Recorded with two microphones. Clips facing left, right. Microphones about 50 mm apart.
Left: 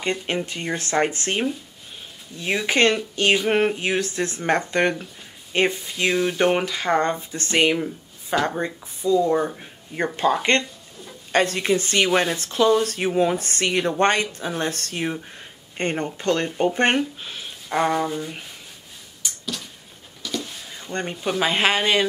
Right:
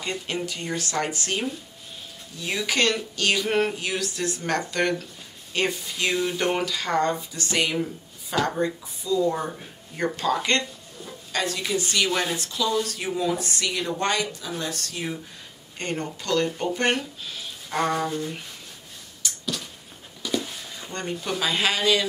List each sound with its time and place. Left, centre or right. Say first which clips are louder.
0.0 s speech: left 4 dB; left
11.3 s speech: left 6 dB; left
17.6 s sanding: left 3 dB; centre
19.4 s a sound: right 1 dB; centre
20.2 s a sound: right 2 dB; centre
20.9 s speech: left 4 dB; left